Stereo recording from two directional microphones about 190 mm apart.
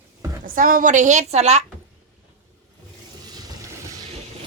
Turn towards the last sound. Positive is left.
turn(degrees=-20)  # may be behind; listen again after turning